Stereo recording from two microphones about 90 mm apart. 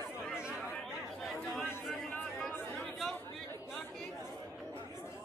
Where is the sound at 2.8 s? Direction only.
5° left (ahead or behind).